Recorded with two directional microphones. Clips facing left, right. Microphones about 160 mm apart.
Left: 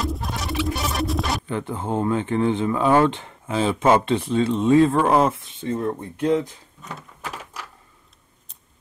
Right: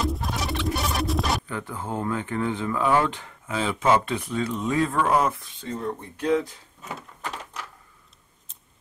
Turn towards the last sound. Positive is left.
turn(degrees=5)  # may be behind; listen again after turning